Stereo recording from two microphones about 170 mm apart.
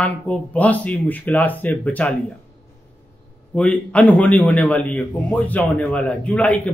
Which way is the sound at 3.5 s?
10° left (ahead or behind).